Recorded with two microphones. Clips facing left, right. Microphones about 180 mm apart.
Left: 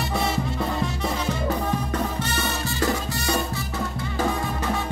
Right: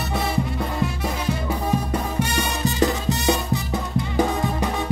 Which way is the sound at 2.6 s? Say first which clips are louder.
Right 6 dB; 20° right (ahead or behind).